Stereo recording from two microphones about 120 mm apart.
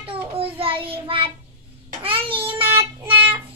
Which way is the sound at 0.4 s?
50° right (ahead or behind).